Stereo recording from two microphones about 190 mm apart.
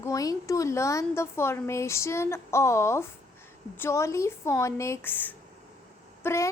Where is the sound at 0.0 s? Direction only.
15° left (ahead or behind).